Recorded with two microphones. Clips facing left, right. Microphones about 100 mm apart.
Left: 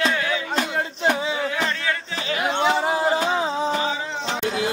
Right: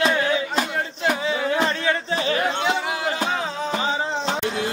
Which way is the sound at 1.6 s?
30° right (ahead or behind).